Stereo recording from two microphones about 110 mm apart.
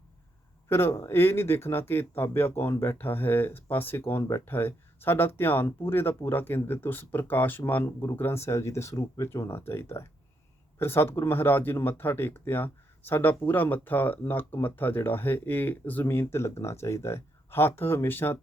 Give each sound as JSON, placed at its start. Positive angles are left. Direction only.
{"t": 0.7, "sound": "speech", "side_deg": 20}